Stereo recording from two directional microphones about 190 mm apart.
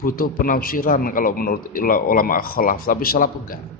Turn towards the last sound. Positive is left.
turn(degrees=50)  # may be behind; listen again after turning